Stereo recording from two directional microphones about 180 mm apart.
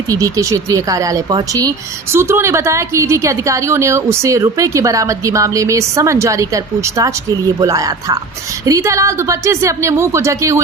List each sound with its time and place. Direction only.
0.1 s a woman's voice: 20° right (ahead or behind)